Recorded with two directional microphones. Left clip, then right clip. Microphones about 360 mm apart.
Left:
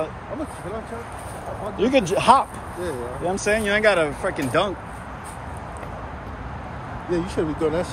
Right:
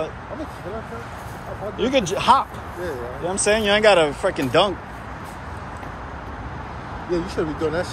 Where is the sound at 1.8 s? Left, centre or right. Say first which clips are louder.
Left 1 dB; centre.